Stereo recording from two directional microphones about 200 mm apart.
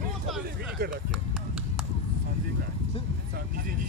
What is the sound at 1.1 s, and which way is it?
Run, centre (ahead or behind).